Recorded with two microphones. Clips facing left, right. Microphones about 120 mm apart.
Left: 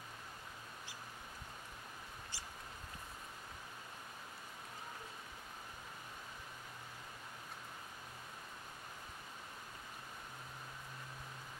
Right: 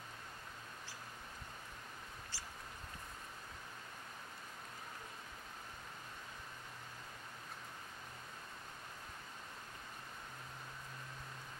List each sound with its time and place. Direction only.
2.3 s mouse: 15° left (ahead or behind)